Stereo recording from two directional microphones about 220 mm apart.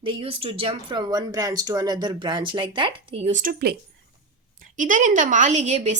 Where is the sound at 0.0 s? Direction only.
25° right (ahead or behind).